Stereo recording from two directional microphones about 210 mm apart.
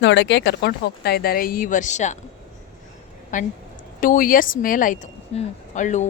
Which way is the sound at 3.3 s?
35° left (ahead or behind).